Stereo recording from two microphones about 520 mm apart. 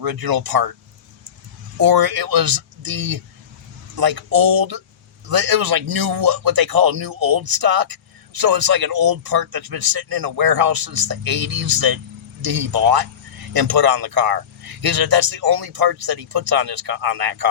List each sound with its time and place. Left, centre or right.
0.0 s a man's voice: right
1.8 s a man's voice: right